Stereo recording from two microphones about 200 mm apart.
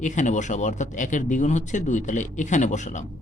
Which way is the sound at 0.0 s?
40° left (ahead or behind).